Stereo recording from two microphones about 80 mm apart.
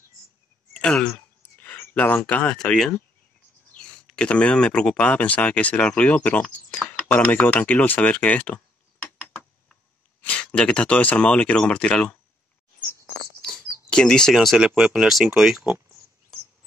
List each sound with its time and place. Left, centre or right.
0.7 s speech: centre
1.6 s a sound: left
2.4 s speech: centre
9.0 s a sound: centre
10.2 s speech: centre
13.8 s speech: centre